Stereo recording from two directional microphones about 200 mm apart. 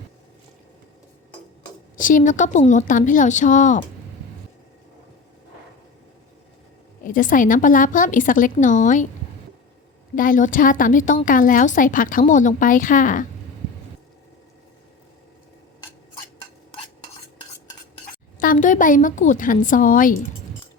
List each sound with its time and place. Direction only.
2.0 s a woman's voice: 40° left (ahead or behind)
7.0 s a woman's voice: 40° left (ahead or behind)
10.2 s a woman's voice: 40° left (ahead or behind)
18.0 s a woman's voice: 40° left (ahead or behind)